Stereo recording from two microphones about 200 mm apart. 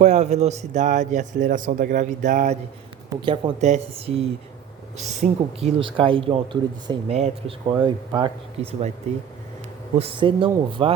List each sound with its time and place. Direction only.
0.0 s a man's voice: 35° right (ahead or behind)
3.2 s speech: 25° right (ahead or behind)
5.2 s speech: 45° right (ahead or behind)
5.5 s speech: 30° right (ahead or behind)
9.1 s a man's voice: 35° right (ahead or behind)